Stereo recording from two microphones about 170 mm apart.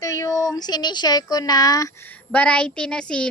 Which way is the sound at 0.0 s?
20° left (ahead or behind).